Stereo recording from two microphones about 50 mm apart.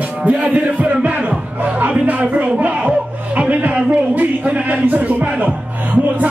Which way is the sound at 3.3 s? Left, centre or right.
Right.